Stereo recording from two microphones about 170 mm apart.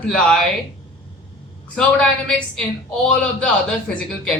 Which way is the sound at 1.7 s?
5° left (ahead or behind).